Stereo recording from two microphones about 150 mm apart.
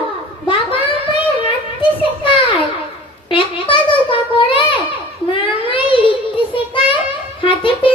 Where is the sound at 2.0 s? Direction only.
35° left (ahead or behind).